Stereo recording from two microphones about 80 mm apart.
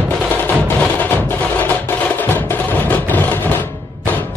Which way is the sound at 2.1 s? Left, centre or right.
Left.